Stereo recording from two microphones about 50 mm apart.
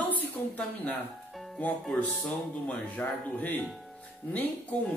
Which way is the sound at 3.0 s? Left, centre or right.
Left.